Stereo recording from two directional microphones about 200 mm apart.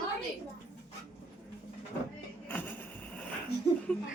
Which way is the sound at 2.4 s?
10° left (ahead or behind).